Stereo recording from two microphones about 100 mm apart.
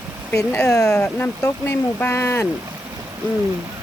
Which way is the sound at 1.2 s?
25° left (ahead or behind).